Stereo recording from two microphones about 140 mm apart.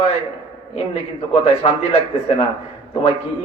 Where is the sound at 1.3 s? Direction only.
50° left (ahead or behind).